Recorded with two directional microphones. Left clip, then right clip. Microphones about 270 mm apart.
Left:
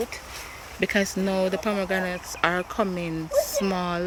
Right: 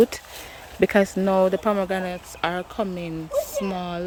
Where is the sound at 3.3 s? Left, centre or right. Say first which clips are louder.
Left 2 dB; centre.